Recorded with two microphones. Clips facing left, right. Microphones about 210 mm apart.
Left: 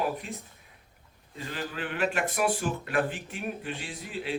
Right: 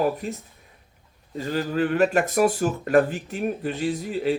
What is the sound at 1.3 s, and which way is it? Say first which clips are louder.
Speech: right 11 dB; 40° right (ahead or behind).